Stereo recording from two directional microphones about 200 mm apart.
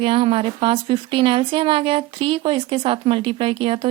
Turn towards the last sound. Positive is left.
turn(degrees=-25)  # may be behind; listen again after turning